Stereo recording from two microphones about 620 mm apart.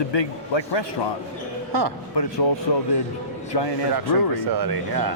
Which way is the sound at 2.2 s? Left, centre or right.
Left.